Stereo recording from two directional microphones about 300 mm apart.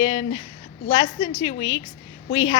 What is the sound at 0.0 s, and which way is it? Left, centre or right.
A woman's voice, centre.